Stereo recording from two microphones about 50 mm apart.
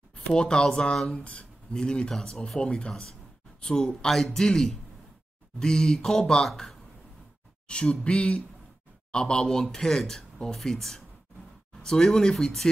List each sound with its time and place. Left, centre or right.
0.1 s speech: centre
0.9 s speech: centre
1.2 s speech: centre
7.6 s speech: left